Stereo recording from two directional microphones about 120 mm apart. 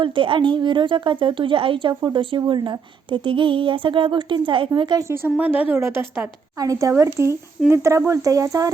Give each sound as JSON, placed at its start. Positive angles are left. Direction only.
{"t": 0.0, "sound": "a woman's voice", "side_deg": -45}
{"t": 5.0, "sound": "speech", "side_deg": -20}
{"t": 6.6, "sound": "speech", "side_deg": -30}